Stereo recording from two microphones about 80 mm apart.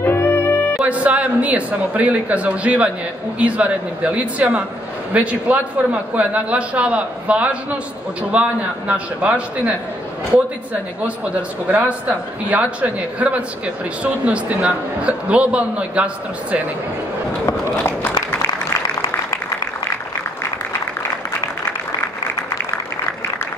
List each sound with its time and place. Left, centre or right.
0.0 s music: left
0.8 s a man's voice: centre
11.7 s a man's voice: centre
17.8 s a sound: left